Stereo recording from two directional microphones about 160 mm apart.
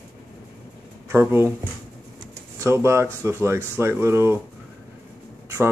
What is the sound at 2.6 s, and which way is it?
Speech, 15° right (ahead or behind).